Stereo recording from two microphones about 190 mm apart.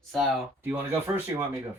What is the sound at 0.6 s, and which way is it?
Speech, 10° right (ahead or behind).